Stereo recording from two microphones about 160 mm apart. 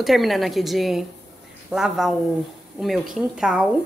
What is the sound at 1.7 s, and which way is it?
A woman's voice, 5° right (ahead or behind).